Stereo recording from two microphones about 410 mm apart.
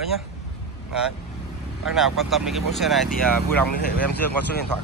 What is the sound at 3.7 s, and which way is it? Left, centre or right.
Speech, left.